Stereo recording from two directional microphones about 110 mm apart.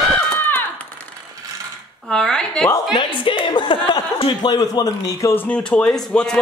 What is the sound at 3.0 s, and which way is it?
Chuckle, 50° left (ahead or behind).